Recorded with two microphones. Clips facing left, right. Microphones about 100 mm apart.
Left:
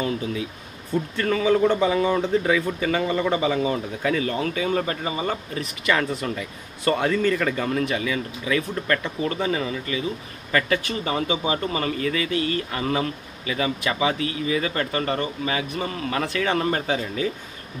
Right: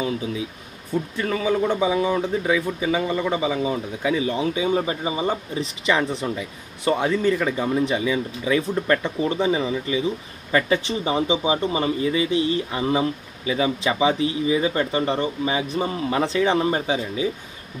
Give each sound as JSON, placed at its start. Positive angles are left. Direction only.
{"t": 0.0, "sound": "speech", "side_deg": -5}